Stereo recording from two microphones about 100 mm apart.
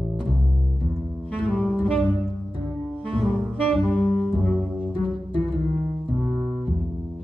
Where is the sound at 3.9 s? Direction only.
10° left (ahead or behind).